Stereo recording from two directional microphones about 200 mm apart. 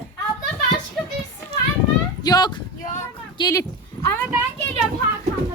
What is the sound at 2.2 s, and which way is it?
Speech, 20° left (ahead or behind).